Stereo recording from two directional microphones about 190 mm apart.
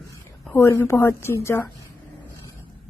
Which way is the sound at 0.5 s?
15° left (ahead or behind).